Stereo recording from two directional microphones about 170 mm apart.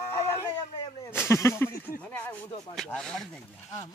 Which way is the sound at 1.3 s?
15° left (ahead or behind).